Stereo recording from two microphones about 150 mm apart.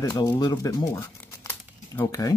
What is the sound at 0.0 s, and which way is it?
Speech, 25° left (ahead or behind).